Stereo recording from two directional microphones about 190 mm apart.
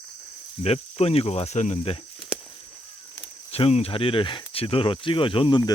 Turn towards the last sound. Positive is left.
turn(degrees=25)  # may be behind; listen again after turning